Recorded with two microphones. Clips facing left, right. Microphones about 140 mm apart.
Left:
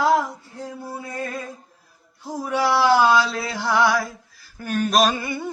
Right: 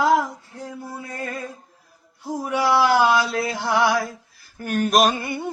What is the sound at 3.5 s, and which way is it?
Mantra, 20° right (ahead or behind).